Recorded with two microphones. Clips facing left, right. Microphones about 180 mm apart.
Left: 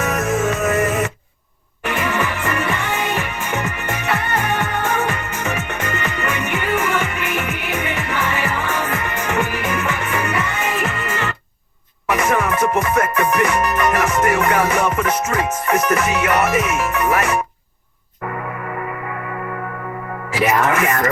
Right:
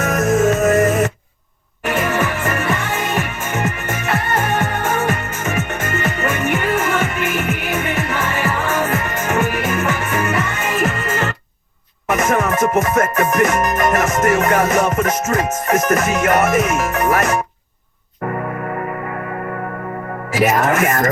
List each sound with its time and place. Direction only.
0.0 s music: 45° right (ahead or behind)
20.3 s music: 40° right (ahead or behind)